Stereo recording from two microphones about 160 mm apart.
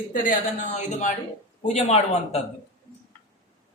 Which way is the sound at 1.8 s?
40° left (ahead or behind).